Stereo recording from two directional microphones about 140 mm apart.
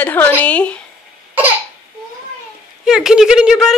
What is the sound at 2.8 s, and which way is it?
Speech, 5° right (ahead or behind).